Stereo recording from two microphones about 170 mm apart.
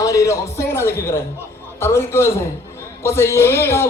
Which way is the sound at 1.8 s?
15° left (ahead or behind).